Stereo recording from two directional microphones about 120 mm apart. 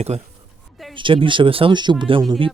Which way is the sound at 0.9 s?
45° right (ahead or behind).